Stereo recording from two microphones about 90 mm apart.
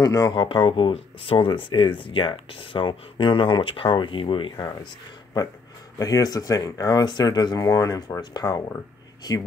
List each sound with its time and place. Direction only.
0.0 s speech: 40° left (ahead or behind)
0.3 s speech: 70° left (ahead or behind)
5.9 s speech: 40° left (ahead or behind)